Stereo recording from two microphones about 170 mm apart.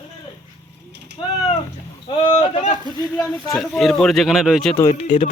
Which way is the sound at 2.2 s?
35° left (ahead or behind).